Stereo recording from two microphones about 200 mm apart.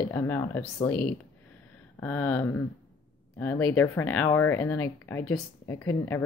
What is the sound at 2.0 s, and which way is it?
Speech, 10° left (ahead or behind).